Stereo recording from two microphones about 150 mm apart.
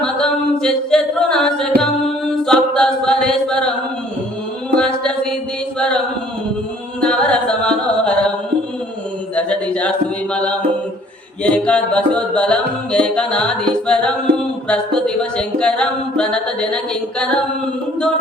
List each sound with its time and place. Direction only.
0.0 s singing: 5° left (ahead or behind)
2.3 s chant: 5° left (ahead or behind)
4.8 s mantra: 5° left (ahead or behind)
7.0 s music: 5° left (ahead or behind)
9.3 s a sound: 10° left (ahead or behind)
10.3 s mantra: 5° left (ahead or behind)
11.4 s music: 5° left (ahead or behind)